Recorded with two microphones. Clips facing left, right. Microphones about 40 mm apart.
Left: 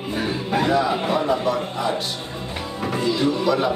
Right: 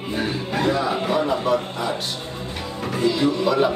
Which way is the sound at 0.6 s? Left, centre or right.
Centre.